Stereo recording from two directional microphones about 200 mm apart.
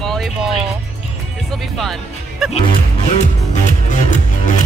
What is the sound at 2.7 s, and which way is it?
Music, 35° left (ahead or behind).